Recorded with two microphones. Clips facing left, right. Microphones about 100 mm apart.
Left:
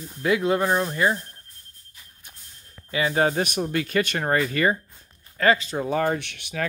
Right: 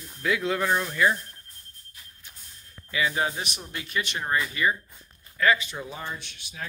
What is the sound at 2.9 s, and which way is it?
Speech, 40° left (ahead or behind).